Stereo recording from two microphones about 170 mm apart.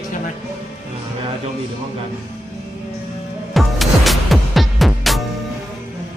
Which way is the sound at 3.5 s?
Centre (ahead or behind).